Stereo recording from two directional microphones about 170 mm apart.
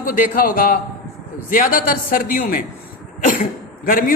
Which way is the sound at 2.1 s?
60° left (ahead or behind).